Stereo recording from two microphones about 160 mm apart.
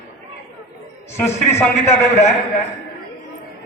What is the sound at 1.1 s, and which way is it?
A man's voice, 15° left (ahead or behind).